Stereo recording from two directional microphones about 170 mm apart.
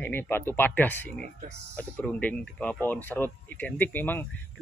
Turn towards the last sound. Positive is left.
turn(degrees=10)  # may be behind; listen again after turning